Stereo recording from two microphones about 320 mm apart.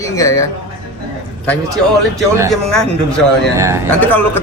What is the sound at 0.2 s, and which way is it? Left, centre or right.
Speech, centre.